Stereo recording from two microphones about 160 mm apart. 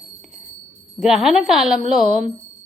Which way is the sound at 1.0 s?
5° right (ahead or behind).